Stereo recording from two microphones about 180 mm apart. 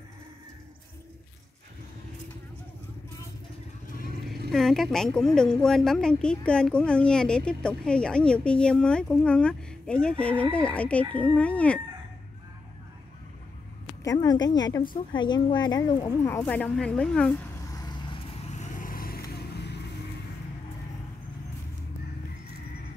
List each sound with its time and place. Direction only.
4.5 s speech: centre (ahead or behind)
14.0 s a woman's voice: 20° left (ahead or behind)
18.6 s vehicle: 45° left (ahead or behind); by 19.8 s 65° left (ahead or behind)